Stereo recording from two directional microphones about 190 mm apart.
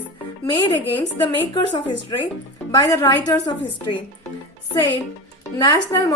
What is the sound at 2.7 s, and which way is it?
A woman's voice, 20° left (ahead or behind).